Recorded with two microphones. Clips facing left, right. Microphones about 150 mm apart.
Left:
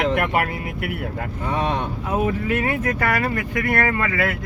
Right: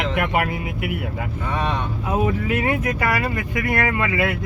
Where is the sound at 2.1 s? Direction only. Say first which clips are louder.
Right 1 dB; 15° right (ahead or behind).